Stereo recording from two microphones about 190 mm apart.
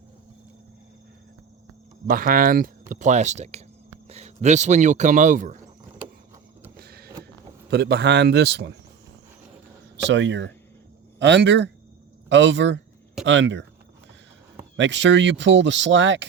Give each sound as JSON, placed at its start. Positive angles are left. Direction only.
{"t": 2.0, "sound": "speech", "side_deg": -50}
{"t": 6.7, "sound": "a sound", "side_deg": -55}
{"t": 7.7, "sound": "a man's voice", "side_deg": -60}
{"t": 10.1, "sound": "speech", "side_deg": -75}
{"t": 14.8, "sound": "speech", "side_deg": -70}